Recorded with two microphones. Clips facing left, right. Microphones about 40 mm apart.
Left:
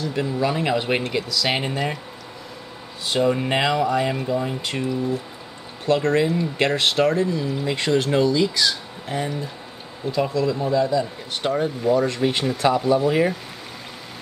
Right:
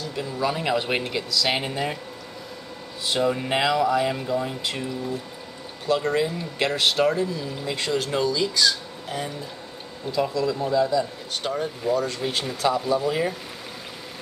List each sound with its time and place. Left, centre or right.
0.1 s speech: centre
0.5 s speech: centre
3.1 s speech: centre
6.1 s speech: centre